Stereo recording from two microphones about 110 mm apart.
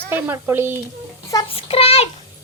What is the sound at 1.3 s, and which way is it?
Child singing, 35° left (ahead or behind).